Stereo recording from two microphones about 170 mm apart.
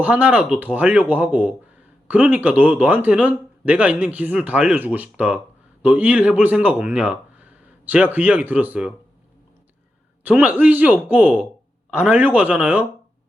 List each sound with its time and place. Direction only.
0.0 s speech: 10° right (ahead or behind)
10.2 s speech: 10° right (ahead or behind)